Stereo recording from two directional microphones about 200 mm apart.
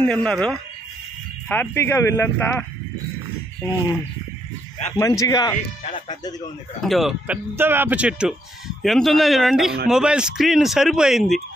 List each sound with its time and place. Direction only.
0.0 s speech: 5° left (ahead or behind)
4.9 s speech: 15° left (ahead or behind)
6.8 s speech: centre (ahead or behind)